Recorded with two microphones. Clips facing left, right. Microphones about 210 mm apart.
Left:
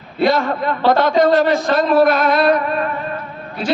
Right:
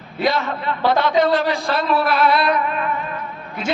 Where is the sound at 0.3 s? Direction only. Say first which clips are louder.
Left 3 dB; 45° left (ahead or behind).